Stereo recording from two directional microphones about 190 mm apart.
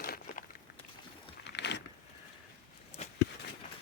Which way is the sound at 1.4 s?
65° left (ahead or behind).